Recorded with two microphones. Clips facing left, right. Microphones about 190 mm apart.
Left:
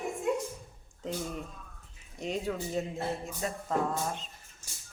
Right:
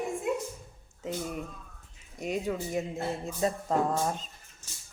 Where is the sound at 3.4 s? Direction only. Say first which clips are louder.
Right 7 dB; 30° right (ahead or behind).